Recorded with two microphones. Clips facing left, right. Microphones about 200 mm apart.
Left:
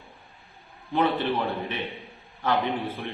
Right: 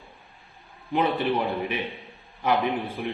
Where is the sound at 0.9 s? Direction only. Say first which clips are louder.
Right 1 dB; 15° right (ahead or behind).